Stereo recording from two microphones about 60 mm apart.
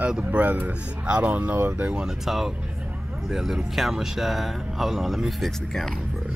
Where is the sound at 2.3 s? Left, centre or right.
Centre.